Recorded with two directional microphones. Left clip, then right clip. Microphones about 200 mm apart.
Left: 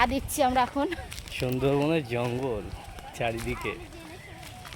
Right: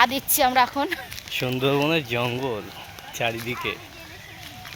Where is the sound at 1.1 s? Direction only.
10° right (ahead or behind).